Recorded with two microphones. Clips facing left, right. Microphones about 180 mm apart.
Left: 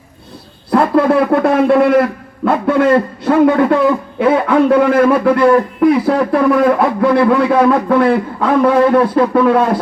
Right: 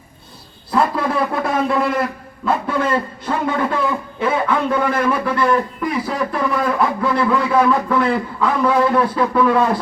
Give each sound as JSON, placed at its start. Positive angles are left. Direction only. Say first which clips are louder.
{"t": 1.3, "sound": "a man's voice", "louder": "left 8 dB", "side_deg": 60}